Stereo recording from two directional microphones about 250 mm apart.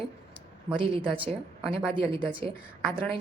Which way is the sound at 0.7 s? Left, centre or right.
Right.